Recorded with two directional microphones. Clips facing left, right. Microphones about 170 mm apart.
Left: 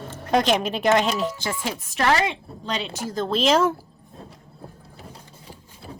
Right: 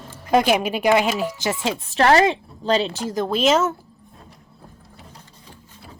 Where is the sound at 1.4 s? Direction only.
20° right (ahead or behind).